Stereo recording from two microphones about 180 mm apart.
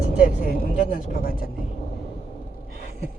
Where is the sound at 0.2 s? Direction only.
50° left (ahead or behind).